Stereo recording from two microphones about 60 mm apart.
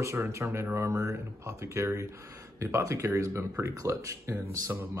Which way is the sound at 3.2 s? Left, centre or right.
Right.